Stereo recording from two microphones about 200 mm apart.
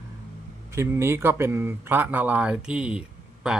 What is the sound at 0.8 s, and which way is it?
Speech, 10° right (ahead or behind).